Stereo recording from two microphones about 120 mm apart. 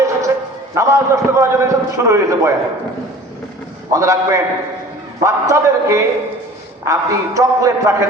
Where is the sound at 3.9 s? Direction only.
25° right (ahead or behind).